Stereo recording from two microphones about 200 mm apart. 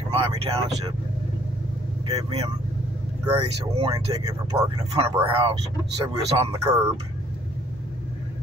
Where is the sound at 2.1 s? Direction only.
30° right (ahead or behind).